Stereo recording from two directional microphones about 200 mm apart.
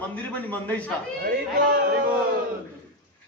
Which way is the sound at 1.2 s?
50° right (ahead or behind).